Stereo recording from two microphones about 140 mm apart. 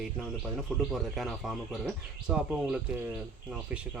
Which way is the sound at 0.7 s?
Centre (ahead or behind).